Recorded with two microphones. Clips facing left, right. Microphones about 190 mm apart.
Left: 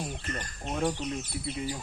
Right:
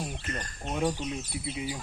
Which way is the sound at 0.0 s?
Centre (ahead or behind).